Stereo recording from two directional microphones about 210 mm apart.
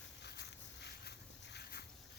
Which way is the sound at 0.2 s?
55° left (ahead or behind).